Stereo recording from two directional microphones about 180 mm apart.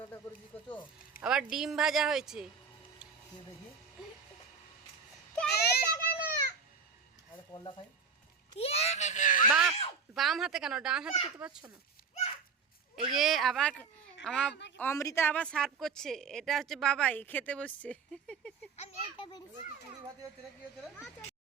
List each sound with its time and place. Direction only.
1.2 s a woman's voice: 5° right (ahead or behind)
5.5 s children playing: 60° left (ahead or behind)
7.5 s a child's voice: 25° left (ahead or behind); by 9.5 s 45° left (ahead or behind)
9.5 s a woman's voice: 5° right (ahead or behind)
13.1 s a woman's voice: centre (ahead or behind)
14.8 s a woman's voice: 15° left (ahead or behind)
18.8 s a child's voice: 25° left (ahead or behind)